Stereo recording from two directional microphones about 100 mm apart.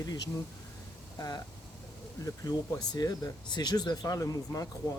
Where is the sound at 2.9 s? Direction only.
40° left (ahead or behind).